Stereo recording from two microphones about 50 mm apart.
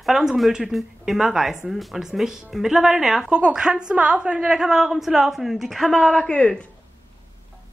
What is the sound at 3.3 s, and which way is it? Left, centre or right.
A woman's voice, right.